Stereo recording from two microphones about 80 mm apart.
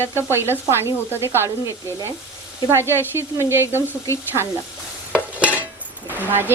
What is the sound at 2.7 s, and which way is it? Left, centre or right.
A woman's voice, right.